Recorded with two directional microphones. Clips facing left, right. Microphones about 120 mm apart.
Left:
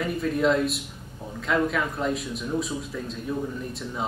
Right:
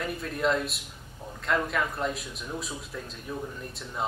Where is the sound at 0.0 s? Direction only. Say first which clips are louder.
Left 5 dB; centre (ahead or behind).